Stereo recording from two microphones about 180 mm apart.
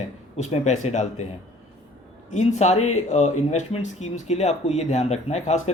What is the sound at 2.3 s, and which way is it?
Speech, 40° left (ahead or behind).